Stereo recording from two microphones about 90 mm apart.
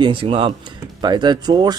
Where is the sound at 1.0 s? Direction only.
55° right (ahead or behind).